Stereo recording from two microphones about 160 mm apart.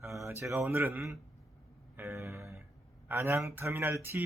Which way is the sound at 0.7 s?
10° right (ahead or behind).